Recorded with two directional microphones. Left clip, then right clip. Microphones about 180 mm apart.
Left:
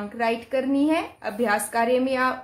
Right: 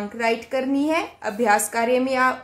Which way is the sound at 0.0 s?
20° right (ahead or behind).